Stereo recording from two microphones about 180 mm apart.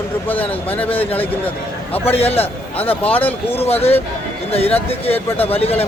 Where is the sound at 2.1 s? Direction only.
35° left (ahead or behind).